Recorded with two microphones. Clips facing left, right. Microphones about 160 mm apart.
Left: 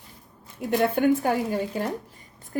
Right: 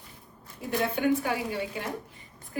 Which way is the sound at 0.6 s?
55° left (ahead or behind).